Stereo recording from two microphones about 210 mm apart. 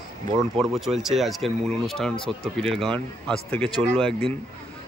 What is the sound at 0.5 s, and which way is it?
Speech, centre (ahead or behind).